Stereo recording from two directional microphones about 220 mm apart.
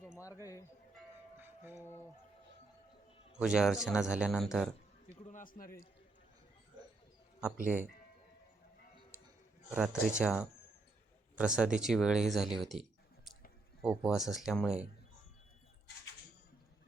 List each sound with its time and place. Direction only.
1.4 s music: 10° right (ahead or behind)
3.4 s speech: 5° right (ahead or behind)
5.3 s a man's voice: 40° left (ahead or behind)
7.5 s speech: 35° right (ahead or behind)
9.6 s speech: 5° right (ahead or behind)
13.8 s speech: 5° right (ahead or behind)